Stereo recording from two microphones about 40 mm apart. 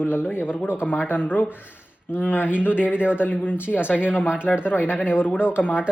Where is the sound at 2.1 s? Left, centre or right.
Left.